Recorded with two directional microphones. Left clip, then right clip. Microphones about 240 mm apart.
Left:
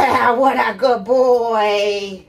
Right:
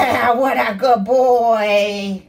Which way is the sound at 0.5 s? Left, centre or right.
Left.